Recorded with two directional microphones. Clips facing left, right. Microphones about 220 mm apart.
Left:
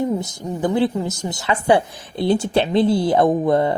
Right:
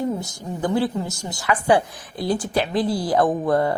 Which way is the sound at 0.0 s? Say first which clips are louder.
Left 3 dB; 20° left (ahead or behind).